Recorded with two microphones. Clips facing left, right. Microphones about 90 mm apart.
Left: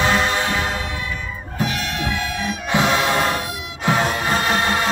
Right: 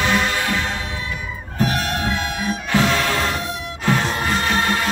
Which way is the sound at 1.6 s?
40° right (ahead or behind).